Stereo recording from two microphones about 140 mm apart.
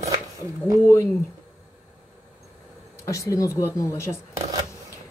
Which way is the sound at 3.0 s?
20° left (ahead or behind).